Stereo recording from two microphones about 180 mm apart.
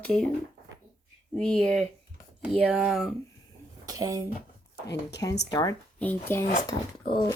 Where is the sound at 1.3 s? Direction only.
5° left (ahead or behind).